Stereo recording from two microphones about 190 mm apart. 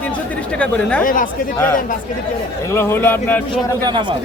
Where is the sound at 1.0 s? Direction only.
45° left (ahead or behind).